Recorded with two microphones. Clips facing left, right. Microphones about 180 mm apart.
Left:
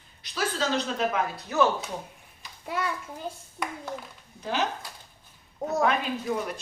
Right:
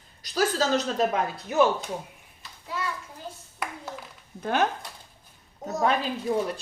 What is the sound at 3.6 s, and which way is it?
Speech, 5° right (ahead or behind).